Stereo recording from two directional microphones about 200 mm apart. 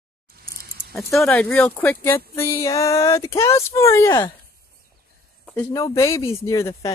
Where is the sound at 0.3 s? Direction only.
50° right (ahead or behind).